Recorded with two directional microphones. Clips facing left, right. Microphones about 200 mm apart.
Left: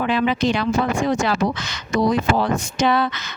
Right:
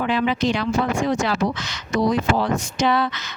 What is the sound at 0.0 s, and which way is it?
Speech, 55° left (ahead or behind).